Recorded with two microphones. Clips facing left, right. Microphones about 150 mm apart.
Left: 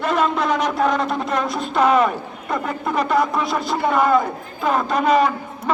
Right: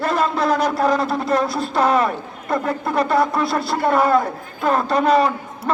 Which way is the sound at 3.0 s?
30° right (ahead or behind).